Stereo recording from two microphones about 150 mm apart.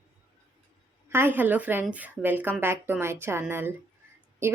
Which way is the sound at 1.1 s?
15° right (ahead or behind).